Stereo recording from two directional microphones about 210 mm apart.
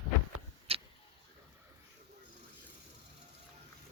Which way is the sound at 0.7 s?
25° right (ahead or behind).